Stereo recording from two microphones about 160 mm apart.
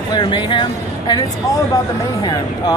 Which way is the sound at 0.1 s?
30° left (ahead or behind).